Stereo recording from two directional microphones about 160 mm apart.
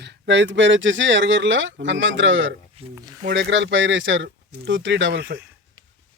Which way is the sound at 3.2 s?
90° right.